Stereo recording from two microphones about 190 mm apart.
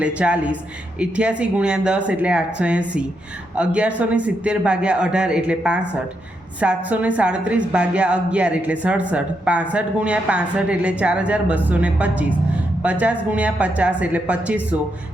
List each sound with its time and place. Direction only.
0.0 s a man's voice: 5° right (ahead or behind)